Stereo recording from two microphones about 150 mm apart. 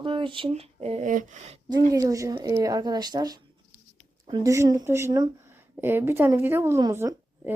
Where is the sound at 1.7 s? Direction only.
20° right (ahead or behind).